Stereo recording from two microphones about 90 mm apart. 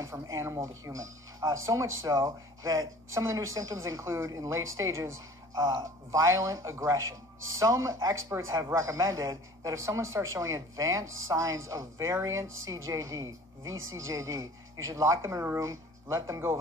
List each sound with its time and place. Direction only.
0.0 s speech: 35° right (ahead or behind)